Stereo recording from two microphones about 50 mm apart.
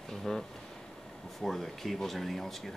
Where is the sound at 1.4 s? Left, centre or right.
Centre.